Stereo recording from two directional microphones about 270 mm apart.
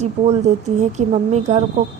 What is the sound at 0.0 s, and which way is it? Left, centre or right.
Speech, right.